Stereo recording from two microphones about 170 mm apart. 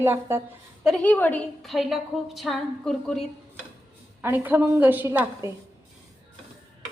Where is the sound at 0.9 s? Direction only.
5° left (ahead or behind).